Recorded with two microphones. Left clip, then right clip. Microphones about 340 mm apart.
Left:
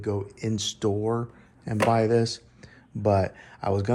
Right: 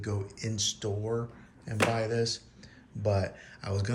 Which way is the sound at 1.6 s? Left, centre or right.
Centre.